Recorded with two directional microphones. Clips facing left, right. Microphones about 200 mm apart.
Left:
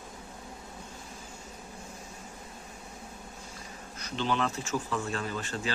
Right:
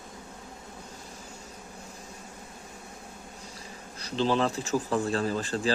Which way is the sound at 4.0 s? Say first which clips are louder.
Right 5 dB; 35° right (ahead or behind).